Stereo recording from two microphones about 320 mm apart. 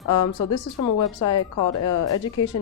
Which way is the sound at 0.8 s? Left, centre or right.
Left.